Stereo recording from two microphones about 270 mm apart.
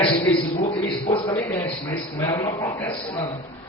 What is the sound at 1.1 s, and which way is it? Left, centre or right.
A man's voice, centre.